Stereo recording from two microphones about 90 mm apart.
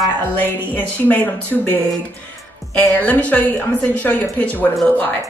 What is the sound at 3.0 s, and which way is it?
Speech, 15° left (ahead or behind).